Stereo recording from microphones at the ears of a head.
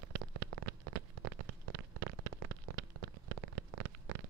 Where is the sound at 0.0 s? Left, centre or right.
Right.